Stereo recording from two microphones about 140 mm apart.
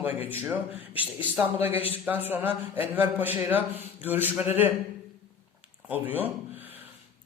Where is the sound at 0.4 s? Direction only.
10° right (ahead or behind).